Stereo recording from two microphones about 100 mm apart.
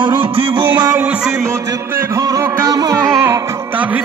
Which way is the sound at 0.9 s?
15° right (ahead or behind).